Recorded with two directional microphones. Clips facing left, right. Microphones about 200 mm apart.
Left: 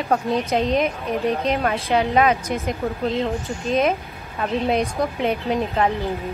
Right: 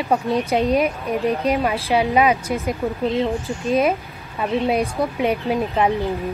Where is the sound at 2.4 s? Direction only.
30° right (ahead or behind).